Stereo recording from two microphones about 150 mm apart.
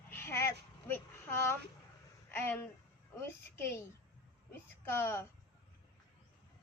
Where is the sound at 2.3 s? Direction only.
15° left (ahead or behind).